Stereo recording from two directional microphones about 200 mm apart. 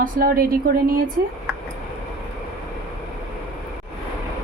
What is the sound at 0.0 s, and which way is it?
A woman's voice, 45° right (ahead or behind).